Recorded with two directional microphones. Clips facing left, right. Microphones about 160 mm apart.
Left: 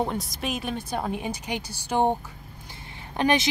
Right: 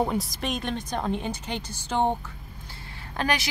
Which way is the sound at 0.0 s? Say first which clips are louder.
Right 1 dB; centre (ahead or behind).